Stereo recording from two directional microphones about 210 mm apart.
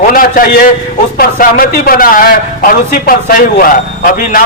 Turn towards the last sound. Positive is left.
turn(degrees=40)  # may be behind; listen again after turning